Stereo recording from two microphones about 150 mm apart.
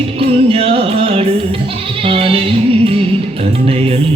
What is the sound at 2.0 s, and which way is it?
Bleat, 35° right (ahead or behind).